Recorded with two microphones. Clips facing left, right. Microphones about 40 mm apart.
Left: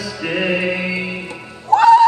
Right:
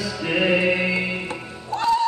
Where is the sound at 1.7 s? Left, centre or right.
Left.